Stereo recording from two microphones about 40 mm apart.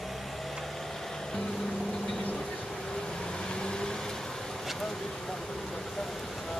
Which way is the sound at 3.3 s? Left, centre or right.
Centre.